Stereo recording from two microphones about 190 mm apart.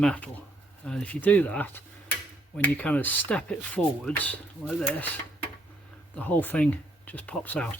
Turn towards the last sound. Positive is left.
turn(degrees=10)  # may be behind; listen again after turning